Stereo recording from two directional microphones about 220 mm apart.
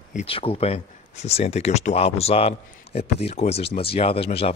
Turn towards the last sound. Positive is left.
turn(degrees=25)  # may be behind; listen again after turning